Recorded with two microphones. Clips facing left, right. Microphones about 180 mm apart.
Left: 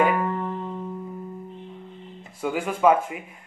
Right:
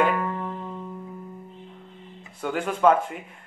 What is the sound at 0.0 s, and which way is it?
Music, 15° left (ahead or behind).